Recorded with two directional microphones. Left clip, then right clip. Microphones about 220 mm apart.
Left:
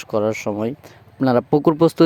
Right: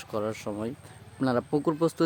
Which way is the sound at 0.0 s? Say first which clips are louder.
Left 11 dB; 30° left (ahead or behind).